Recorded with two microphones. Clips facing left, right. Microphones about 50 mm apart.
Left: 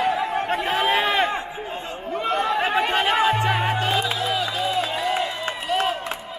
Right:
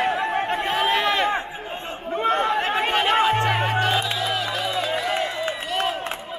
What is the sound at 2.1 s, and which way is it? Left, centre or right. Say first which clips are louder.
Chatter: right 2 dB; right.